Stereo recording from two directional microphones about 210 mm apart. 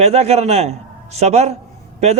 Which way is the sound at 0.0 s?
30° right (ahead or behind).